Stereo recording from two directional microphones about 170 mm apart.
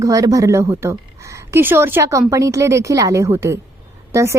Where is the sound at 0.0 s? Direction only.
20° right (ahead or behind).